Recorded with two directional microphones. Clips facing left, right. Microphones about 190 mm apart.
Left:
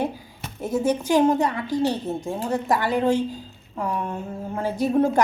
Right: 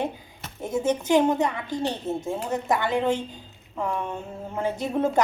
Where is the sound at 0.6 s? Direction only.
20° right (ahead or behind).